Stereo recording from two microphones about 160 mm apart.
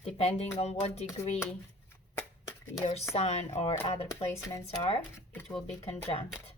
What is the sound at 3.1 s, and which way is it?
Speech, 40° left (ahead or behind).